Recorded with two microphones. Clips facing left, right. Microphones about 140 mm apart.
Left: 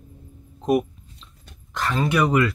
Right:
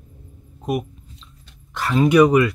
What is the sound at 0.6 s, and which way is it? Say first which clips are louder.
Speech: left 4 dB; centre (ahead or behind).